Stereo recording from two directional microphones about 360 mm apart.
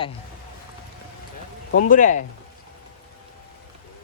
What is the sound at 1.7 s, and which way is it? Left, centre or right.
Speech, left.